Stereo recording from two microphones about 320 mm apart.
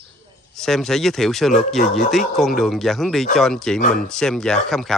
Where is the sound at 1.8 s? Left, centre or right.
Left.